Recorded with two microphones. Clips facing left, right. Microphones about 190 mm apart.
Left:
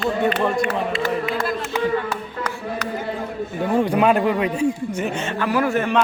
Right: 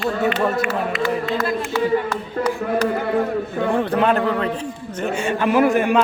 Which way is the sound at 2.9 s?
60° right (ahead or behind).